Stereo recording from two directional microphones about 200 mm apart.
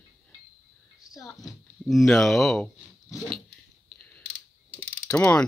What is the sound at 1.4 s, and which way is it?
Speech, centre (ahead or behind).